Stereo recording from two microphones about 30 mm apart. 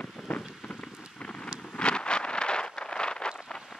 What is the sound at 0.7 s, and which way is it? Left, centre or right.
Rain, left.